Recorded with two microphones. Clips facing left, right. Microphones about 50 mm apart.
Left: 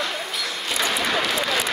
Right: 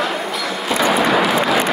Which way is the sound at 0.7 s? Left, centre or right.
Centre.